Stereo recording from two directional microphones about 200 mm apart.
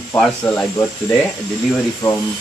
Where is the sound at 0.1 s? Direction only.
Centre (ahead or behind).